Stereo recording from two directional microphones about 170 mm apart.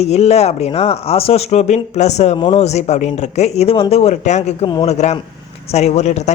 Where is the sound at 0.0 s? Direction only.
40° left (ahead or behind).